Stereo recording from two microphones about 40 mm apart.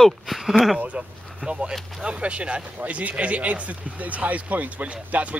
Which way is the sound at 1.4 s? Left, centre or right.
Left.